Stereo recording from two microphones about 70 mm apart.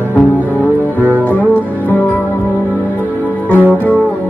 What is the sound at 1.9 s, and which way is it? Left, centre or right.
Music, left.